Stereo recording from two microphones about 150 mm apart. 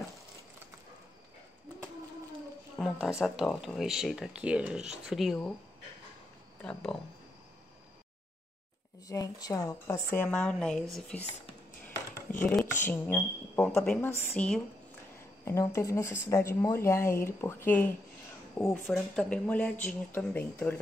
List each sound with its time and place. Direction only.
2.8 s speech: 5° right (ahead or behind)
6.6 s speech: 5° left (ahead or behind)
9.0 s speech: 20° left (ahead or behind); by 11.2 s 5° left (ahead or behind)
12.3 s speech: 10° left (ahead or behind)
15.4 s speech: 20° left (ahead or behind)